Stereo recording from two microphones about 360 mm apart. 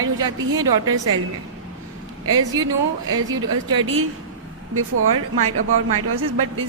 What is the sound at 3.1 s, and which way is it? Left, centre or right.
Speech, centre.